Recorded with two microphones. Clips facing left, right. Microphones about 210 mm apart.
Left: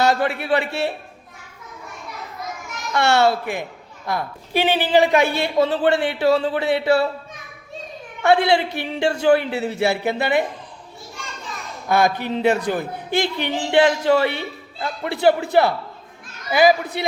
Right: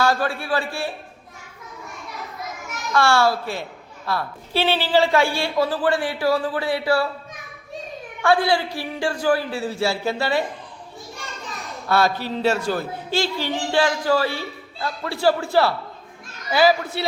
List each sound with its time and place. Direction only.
0.0 s a woman's voice: 20° left (ahead or behind)
2.9 s a woman's voice: 20° left (ahead or behind)
8.2 s a woman's voice: 20° left (ahead or behind)
11.9 s a woman's voice: 15° left (ahead or behind)